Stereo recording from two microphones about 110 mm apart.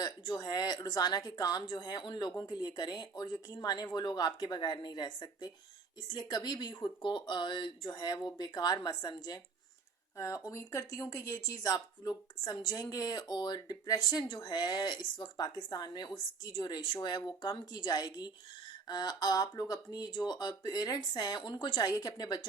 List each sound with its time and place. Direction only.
0.0 s speech: 40° left (ahead or behind)